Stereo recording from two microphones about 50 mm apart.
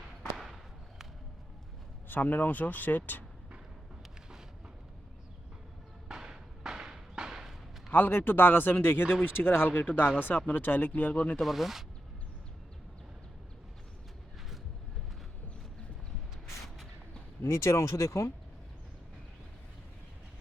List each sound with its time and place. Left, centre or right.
0.3 s a sound: centre
2.0 s speech: left
6.1 s a sound: centre
7.9 s speech: left
11.3 s speech: centre
17.4 s speech: left